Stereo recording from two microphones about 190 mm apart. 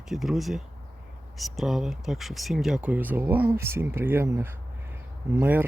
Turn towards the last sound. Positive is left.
turn(degrees=-10)  # may be behind; listen again after turning